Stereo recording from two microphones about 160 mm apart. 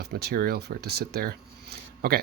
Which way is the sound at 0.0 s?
90° right.